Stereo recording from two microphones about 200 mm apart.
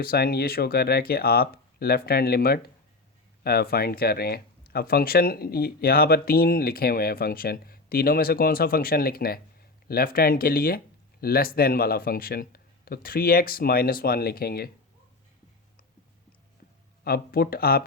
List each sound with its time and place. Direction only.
0.0 s speech: 50° left (ahead or behind)
17.0 s speech: 50° left (ahead or behind)